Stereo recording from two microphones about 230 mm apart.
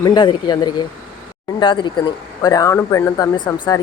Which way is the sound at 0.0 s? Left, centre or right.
Centre.